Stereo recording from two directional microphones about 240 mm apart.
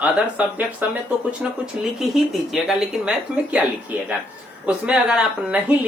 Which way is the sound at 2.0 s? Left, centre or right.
Centre.